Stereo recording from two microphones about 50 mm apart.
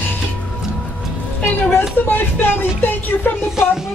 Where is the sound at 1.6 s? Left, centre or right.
Left.